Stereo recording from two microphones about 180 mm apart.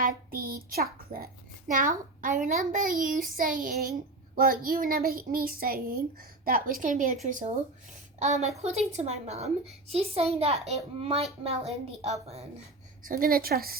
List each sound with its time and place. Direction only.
0.0 s a child's voice: 55° right (ahead or behind)
8.2 s a child's voice: 40° right (ahead or behind)
13.1 s a woman's voice: 55° right (ahead or behind)